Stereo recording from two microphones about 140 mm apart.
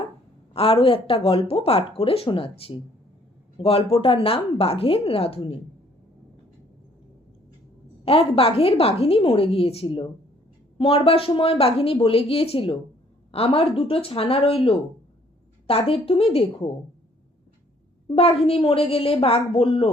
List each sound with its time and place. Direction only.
0.5 s a woman's voice: 40° left (ahead or behind)
8.0 s a woman's voice: 40° left (ahead or behind)
18.1 s a woman's voice: 45° left (ahead or behind)